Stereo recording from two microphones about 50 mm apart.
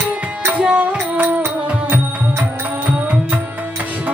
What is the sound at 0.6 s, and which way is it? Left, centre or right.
Music, right.